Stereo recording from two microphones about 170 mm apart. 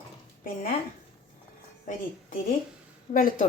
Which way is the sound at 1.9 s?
55° left (ahead or behind).